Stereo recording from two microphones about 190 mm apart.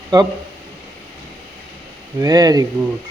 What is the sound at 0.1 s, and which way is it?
Speech, 20° right (ahead or behind).